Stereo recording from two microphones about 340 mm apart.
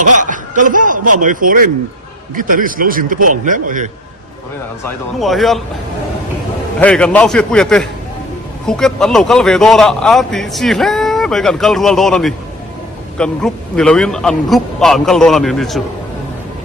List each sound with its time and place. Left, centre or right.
0.0 s chuckle: right
1.2 s a man's voice: right
5.2 s a man's voice: centre
6.7 s a man's voice: centre